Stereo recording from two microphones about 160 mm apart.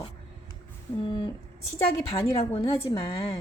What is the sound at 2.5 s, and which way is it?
Speech, 25° left (ahead or behind).